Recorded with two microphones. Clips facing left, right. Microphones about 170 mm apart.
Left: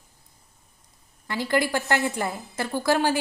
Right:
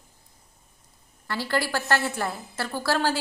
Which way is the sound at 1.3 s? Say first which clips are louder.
Left 3 dB; 15° left (ahead or behind).